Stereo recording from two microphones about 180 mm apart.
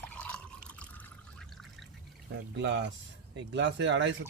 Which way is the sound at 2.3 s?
75° right (ahead or behind).